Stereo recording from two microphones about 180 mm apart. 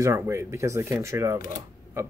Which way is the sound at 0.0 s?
15° right (ahead or behind).